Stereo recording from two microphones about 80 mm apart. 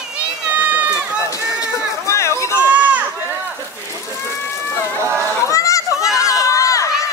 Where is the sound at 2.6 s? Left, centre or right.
Centre.